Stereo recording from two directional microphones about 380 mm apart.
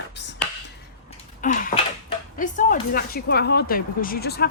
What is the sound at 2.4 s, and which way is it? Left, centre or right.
Speech, left.